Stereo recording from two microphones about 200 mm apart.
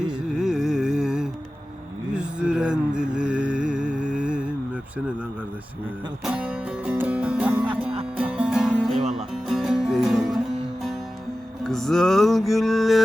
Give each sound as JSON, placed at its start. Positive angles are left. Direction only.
{"t": 0.3, "sound": "music", "side_deg": -5}
{"t": 6.2, "sound": "music", "side_deg": -5}
{"t": 9.0, "sound": "music", "side_deg": -35}
{"t": 9.3, "sound": "music", "side_deg": 0}
{"t": 11.6, "sound": "music", "side_deg": 0}